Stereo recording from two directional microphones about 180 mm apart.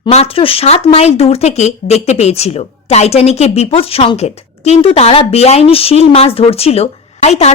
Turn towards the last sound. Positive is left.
turn(degrees=35)  # may be behind; listen again after turning